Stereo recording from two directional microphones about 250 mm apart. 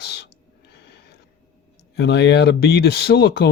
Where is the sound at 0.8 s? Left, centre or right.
Left.